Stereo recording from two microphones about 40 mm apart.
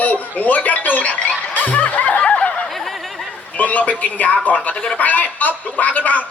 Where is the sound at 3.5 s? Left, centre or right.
Left.